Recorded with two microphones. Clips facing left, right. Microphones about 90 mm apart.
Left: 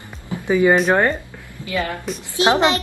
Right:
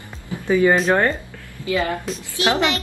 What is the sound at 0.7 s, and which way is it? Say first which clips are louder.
Speech: left 1 dB; 5° left (ahead or behind).